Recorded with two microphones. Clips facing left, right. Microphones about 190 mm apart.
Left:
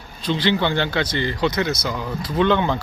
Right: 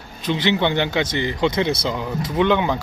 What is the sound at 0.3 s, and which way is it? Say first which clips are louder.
A man's voice: right 1 dB; 20° right (ahead or behind).